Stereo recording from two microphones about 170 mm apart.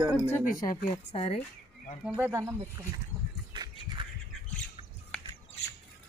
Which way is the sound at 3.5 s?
25° right (ahead or behind).